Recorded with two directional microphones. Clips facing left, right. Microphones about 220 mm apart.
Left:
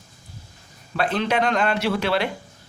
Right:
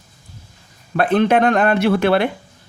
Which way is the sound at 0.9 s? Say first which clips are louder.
Right 7 dB; 55° right (ahead or behind).